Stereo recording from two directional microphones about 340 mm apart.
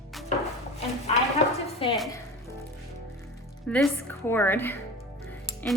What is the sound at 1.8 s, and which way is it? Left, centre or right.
Speech, centre.